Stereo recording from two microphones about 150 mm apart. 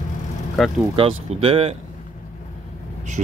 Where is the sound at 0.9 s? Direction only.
40° right (ahead or behind).